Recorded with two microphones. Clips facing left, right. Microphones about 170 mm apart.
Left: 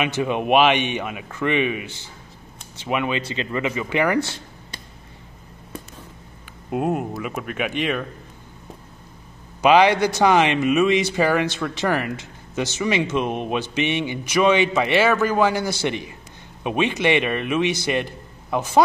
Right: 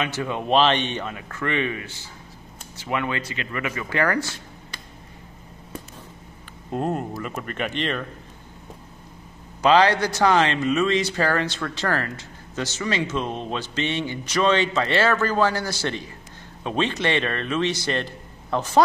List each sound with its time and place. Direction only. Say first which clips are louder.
0.0 s a man's voice: left 4 dB; 15° left (ahead or behind)
6.7 s a man's voice: left 3 dB; 5° left (ahead or behind)
9.6 s a man's voice: left 2 dB; 15° left (ahead or behind)